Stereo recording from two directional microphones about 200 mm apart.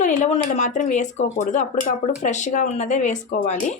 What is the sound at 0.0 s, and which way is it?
Speech, 35° left (ahead or behind).